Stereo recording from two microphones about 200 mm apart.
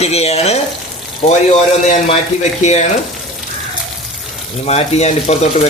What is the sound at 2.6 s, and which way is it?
Speech, 35° left (ahead or behind).